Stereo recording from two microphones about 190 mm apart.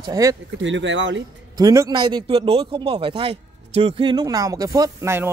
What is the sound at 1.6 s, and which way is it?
Speech, 20° right (ahead or behind).